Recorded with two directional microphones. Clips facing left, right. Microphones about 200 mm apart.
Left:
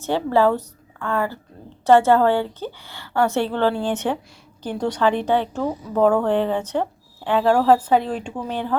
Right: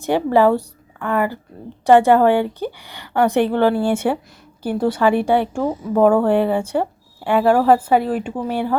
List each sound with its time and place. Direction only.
0.0 s a woman's voice: 15° right (ahead or behind)